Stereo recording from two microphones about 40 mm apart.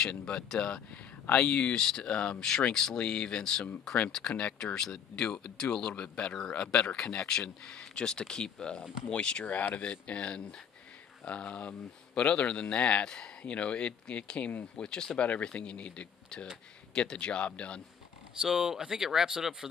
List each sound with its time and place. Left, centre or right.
0.0 s speech: left
1.3 s speech: left
1.7 s speech: centre
4.7 s speech: centre
9.5 s speech: left
18.4 s speech: centre